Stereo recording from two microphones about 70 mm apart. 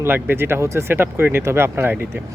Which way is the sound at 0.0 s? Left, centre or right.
Right.